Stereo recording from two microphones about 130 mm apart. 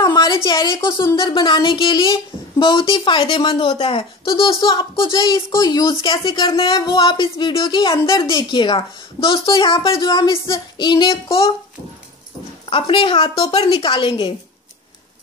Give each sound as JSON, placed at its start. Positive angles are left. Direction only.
{"t": 0.0, "sound": "a sound", "side_deg": 30}
{"t": 0.8, "sound": "speech", "side_deg": 20}
{"t": 1.1, "sound": "a woman's voice", "side_deg": 40}
{"t": 12.6, "sound": "a woman's voice", "side_deg": 45}